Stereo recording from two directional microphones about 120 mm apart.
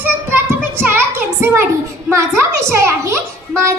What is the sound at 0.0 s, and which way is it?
Child singing, 15° right (ahead or behind).